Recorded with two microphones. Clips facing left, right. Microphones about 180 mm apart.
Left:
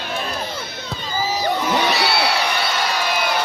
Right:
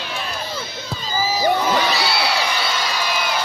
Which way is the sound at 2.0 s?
60° left (ahead or behind).